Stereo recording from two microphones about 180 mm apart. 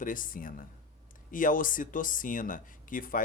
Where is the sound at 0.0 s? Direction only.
50° left (ahead or behind).